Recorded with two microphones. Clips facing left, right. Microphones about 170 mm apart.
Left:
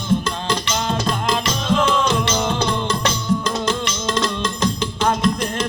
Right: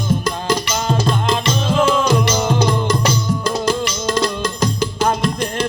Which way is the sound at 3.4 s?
35° right (ahead or behind).